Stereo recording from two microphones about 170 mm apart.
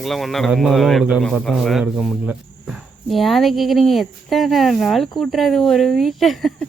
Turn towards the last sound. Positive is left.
turn(degrees=0)  # may be behind; listen again after turning